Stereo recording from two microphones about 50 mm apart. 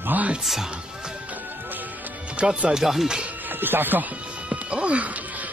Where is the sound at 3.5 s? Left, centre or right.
Right.